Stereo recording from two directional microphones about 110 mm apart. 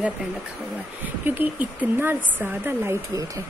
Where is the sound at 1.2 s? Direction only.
15° right (ahead or behind).